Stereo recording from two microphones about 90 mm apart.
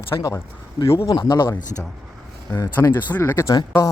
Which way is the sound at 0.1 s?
50° left (ahead or behind).